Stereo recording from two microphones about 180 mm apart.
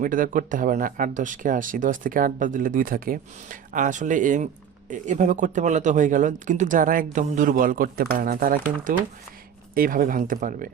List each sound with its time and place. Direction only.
0.0 s speech: 50° right (ahead or behind)